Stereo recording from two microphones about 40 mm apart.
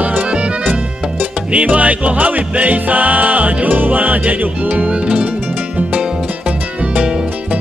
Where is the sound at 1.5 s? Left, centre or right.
Right.